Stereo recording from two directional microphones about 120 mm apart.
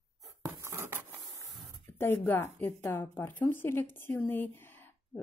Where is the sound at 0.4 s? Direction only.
25° right (ahead or behind).